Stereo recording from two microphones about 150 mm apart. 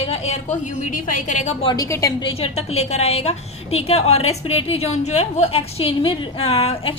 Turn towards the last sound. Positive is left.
turn(degrees=40)  # may be behind; listen again after turning